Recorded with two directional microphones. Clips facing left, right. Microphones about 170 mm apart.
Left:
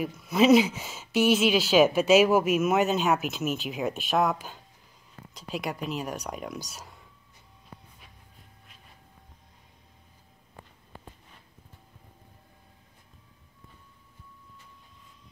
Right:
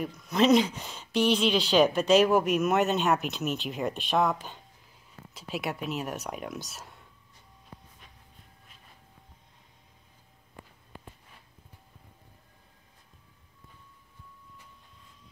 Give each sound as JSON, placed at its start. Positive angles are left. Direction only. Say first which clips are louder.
{"t": 0.0, "sound": "speech", "louder": "left 2 dB", "side_deg": 5}